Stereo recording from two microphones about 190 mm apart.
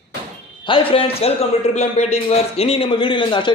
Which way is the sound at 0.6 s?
25° left (ahead or behind).